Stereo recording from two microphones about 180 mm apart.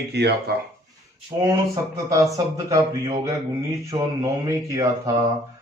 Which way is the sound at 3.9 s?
25° right (ahead or behind).